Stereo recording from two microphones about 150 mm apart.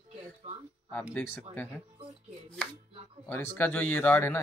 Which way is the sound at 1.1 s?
15° left (ahead or behind).